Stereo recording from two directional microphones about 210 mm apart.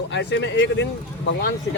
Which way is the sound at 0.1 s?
55° left (ahead or behind).